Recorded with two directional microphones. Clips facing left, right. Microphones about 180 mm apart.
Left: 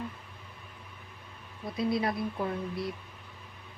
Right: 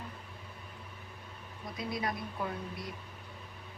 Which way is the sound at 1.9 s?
30° left (ahead or behind).